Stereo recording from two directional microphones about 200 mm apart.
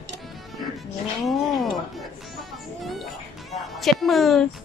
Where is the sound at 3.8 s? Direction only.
Centre (ahead or behind).